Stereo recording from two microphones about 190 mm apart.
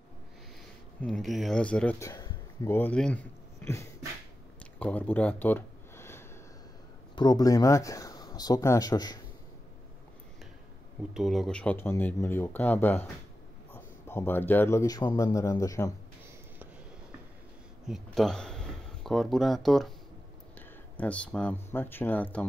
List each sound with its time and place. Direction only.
1.0 s speech: centre (ahead or behind)
4.7 s a sound: 10° left (ahead or behind)
7.2 s speech: 20° left (ahead or behind)
11.1 s speech: centre (ahead or behind); by 15.9 s 15° left (ahead or behind)
17.8 s speech: centre (ahead or behind)
21.0 s speech: 5° left (ahead or behind)